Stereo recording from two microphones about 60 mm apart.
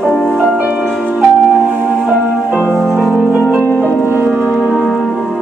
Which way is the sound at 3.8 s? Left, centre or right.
Left.